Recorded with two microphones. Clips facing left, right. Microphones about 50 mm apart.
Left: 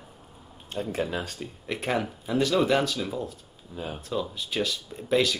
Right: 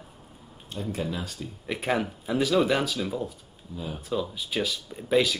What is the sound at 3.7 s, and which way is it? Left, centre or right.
Speech, left.